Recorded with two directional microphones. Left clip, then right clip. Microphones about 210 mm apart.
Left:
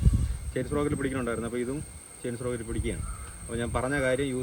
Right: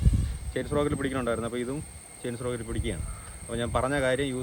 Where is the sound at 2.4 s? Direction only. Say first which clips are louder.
Even; 10° right (ahead or behind).